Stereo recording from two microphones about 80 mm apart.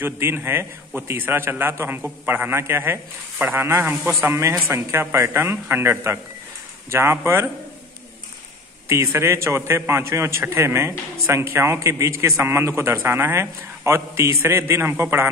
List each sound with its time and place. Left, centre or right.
0.0 s a man's voice: right
8.8 s a man's voice: right